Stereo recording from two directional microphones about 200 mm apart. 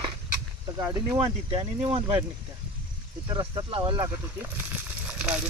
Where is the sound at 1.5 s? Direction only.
25° right (ahead or behind).